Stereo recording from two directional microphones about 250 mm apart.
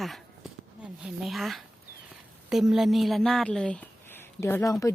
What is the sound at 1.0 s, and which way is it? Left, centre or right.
Speech, centre.